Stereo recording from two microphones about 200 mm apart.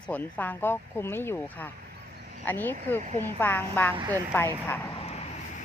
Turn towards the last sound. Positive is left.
turn(degrees=30)  # may be behind; listen again after turning